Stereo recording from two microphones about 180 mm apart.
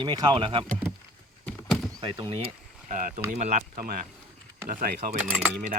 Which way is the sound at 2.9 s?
45° right (ahead or behind).